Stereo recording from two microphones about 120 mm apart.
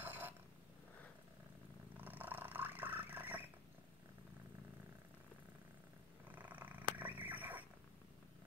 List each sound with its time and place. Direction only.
0.0 s purr: 15° right (ahead or behind)
2.0 s purr: 15° right (ahead or behind)
6.2 s purr: 15° right (ahead or behind)